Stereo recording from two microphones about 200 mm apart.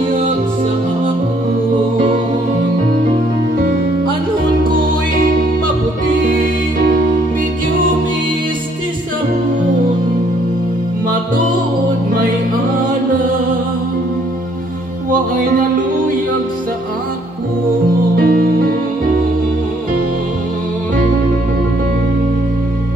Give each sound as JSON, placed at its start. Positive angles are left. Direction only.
{"t": 18.1, "sound": "music", "side_deg": -45}